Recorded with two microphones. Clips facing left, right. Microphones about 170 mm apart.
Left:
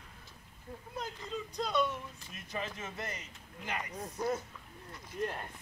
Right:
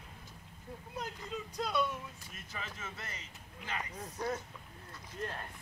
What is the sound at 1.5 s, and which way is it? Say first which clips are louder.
Speech: left 2 dB; 5° right (ahead or behind).